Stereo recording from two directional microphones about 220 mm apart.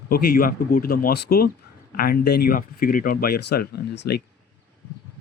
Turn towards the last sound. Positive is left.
turn(degrees=50)  # may be behind; listen again after turning